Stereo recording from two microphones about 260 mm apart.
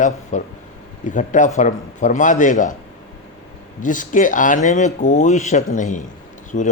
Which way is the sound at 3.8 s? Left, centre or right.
Left.